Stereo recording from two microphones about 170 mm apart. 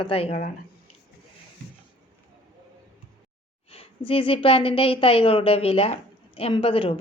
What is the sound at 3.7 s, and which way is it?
A woman's voice, 35° left (ahead or behind).